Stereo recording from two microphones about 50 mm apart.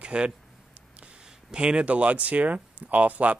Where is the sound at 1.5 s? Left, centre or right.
Centre.